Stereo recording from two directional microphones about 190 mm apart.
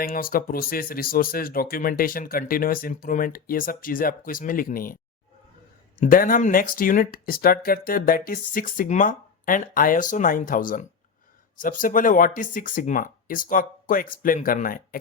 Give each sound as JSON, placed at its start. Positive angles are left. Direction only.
{"t": 0.0, "sound": "speech", "side_deg": 50}
{"t": 6.0, "sound": "speech", "side_deg": 45}